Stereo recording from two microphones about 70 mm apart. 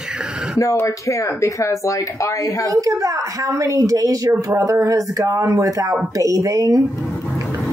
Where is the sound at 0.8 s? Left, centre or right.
Left.